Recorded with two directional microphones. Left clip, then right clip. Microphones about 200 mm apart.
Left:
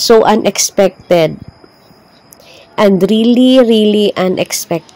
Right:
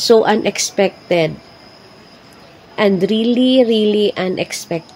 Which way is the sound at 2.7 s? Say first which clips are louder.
Left 5 dB; 40° left (ahead or behind).